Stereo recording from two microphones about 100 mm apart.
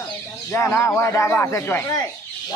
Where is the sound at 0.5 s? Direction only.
25° left (ahead or behind).